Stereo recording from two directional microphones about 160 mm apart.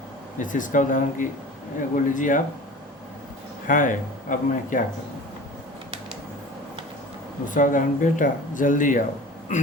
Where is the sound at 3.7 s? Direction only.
55° left (ahead or behind).